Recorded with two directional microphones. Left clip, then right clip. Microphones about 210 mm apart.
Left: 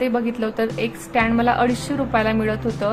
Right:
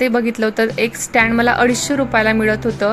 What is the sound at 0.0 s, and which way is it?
A woman's voice, 20° right (ahead or behind).